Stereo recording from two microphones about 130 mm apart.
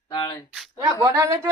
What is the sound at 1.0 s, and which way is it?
Speech, 25° right (ahead or behind).